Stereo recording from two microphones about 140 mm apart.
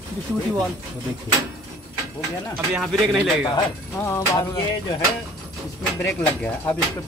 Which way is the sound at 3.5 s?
20° left (ahead or behind).